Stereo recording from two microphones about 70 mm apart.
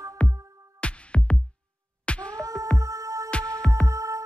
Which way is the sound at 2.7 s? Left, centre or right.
Right.